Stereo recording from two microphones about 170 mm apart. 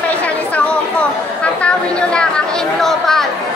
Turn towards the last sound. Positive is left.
turn(degrees=0)  # may be behind; listen again after turning